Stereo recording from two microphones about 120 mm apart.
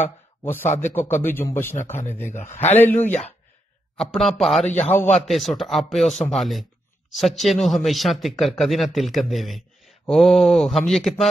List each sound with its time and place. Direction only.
0.7 s a man's voice: 75° left (ahead or behind)
0.9 s a man's voice: 20° left (ahead or behind)
4.0 s speech: 5° left (ahead or behind)
4.7 s speech: 15° left (ahead or behind)
5.2 s speech: centre (ahead or behind)